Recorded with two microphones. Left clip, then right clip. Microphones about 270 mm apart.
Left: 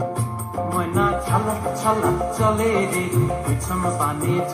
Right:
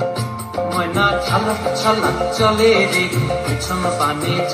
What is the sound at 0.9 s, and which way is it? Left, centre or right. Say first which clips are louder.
Music: right 4 dB; centre.